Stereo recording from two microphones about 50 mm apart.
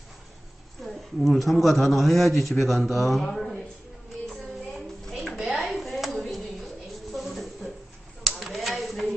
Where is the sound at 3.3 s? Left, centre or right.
Centre.